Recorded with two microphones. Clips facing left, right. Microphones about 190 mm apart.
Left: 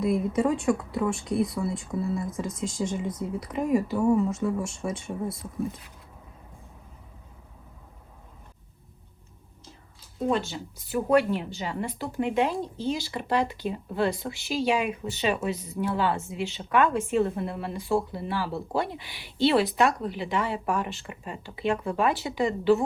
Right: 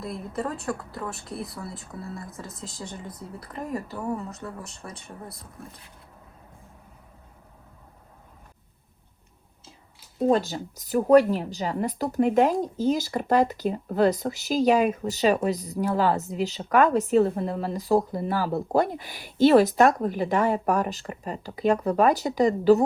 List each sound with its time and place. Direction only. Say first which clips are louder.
0.0 s speech: left 7 dB; centre (ahead or behind)
10.2 s a woman's voice: right 5 dB; 40° right (ahead or behind)